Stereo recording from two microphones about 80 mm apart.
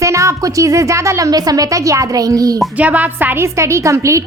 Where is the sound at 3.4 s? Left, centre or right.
Right.